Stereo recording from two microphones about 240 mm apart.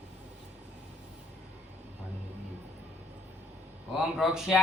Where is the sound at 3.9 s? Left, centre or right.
Centre.